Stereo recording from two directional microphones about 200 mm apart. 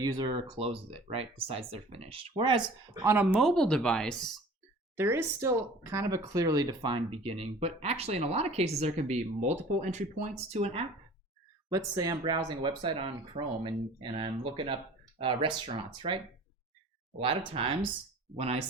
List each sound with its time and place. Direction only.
0.0 s speech: 20° right (ahead or behind)
3.4 s speech: centre (ahead or behind)
4.9 s speech: 10° right (ahead or behind); by 10.8 s 30° right (ahead or behind)
11.9 s speech: 20° right (ahead or behind)